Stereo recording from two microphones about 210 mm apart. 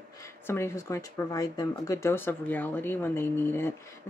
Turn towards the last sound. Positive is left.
turn(degrees=10)  # may be behind; listen again after turning